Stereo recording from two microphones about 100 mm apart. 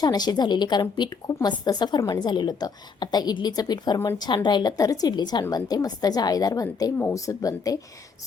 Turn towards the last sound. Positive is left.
turn(degrees=35)  # may be behind; listen again after turning